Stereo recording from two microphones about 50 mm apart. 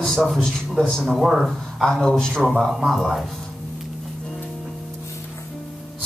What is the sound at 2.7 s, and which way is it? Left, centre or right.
Speech, centre.